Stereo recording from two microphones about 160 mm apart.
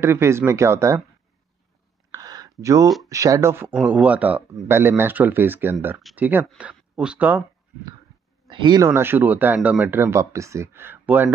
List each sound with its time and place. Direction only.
0.0 s speech: 15° right (ahead or behind)
2.0 s a sound: 20° right (ahead or behind)
3.1 s speech: 20° right (ahead or behind)
8.5 s speech: 30° right (ahead or behind)
8.8 s speech: 15° right (ahead or behind)